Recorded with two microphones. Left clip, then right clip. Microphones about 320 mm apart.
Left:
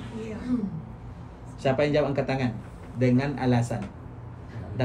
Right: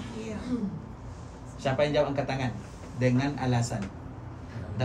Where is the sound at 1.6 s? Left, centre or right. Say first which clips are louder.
Left 2 dB; left.